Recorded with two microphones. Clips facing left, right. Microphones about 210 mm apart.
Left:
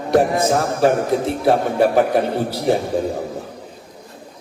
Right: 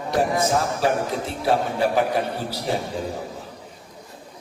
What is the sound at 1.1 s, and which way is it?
A man's voice, 60° left (ahead or behind).